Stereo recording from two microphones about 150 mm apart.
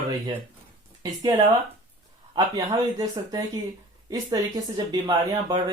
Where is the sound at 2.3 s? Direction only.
25° right (ahead or behind).